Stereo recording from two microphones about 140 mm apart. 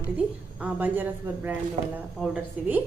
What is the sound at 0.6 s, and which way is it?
Speech, 15° right (ahead or behind).